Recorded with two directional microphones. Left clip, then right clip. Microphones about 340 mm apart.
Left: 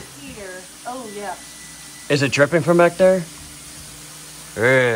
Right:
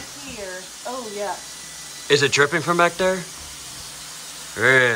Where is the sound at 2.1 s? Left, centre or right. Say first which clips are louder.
Even; centre.